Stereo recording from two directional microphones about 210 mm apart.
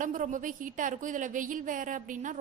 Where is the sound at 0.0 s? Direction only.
40° right (ahead or behind).